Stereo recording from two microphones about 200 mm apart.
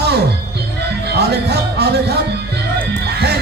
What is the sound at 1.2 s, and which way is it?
Speech, 55° right (ahead or behind).